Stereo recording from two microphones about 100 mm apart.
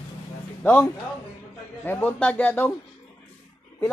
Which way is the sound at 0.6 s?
20° left (ahead or behind).